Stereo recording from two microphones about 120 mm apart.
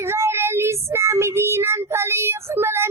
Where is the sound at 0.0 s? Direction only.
20° right (ahead or behind).